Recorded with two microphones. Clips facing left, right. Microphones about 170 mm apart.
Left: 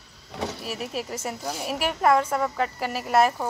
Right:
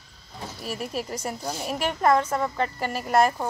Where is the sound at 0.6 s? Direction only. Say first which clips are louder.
Even; 5° left (ahead or behind).